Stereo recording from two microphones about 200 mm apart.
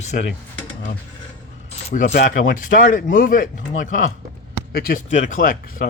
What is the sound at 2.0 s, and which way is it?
Speech, 55° left (ahead or behind).